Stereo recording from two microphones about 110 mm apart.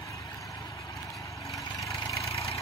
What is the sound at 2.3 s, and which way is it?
Engine, 65° left (ahead or behind).